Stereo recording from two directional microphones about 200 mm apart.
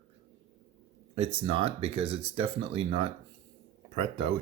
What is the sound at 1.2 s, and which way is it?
Speech, 30° right (ahead or behind).